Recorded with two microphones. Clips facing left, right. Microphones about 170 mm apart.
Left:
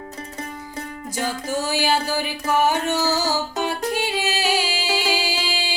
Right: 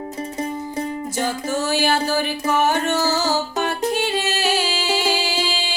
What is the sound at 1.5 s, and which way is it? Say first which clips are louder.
Music: right 1 dB; 10° left (ahead or behind).